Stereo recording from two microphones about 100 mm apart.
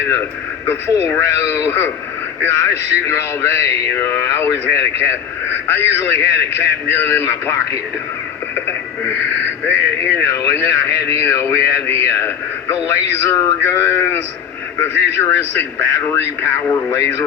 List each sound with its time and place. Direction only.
0.2 s speech: 25° left (ahead or behind)
8.5 s radio: 20° left (ahead or behind)
9.6 s speech: 20° left (ahead or behind)